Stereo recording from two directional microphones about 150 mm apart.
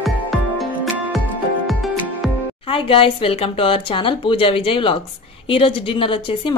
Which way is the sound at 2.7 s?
35° left (ahead or behind).